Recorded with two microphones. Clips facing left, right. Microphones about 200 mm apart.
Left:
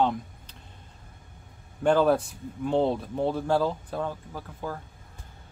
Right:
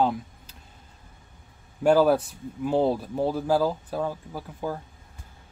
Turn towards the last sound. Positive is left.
turn(degrees=-10)  # may be behind; listen again after turning